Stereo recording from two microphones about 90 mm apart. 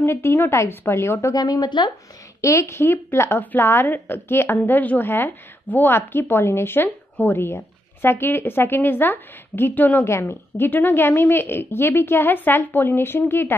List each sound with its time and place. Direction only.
0.0 s a woman's voice: 25° left (ahead or behind)
1.3 s a woman's voice: 45° left (ahead or behind)
2.4 s a woman's voice: 30° left (ahead or behind)